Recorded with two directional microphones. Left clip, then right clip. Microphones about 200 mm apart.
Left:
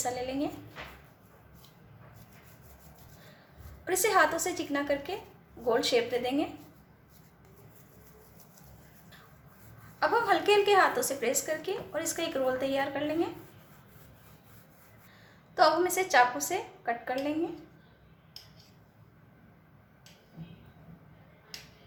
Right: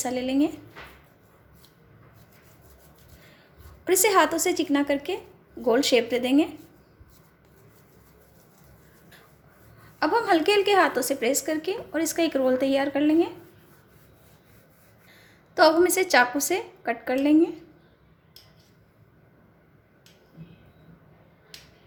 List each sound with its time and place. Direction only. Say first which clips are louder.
0.0 s a woman's voice: right 7 dB; 40° right (ahead or behind)
3.8 s a woman's voice: right 5 dB; 40° right (ahead or behind)
10.0 s a woman's voice: right 4 dB; 40° right (ahead or behind)
15.5 s a woman's voice: right 6 dB; 45° right (ahead or behind)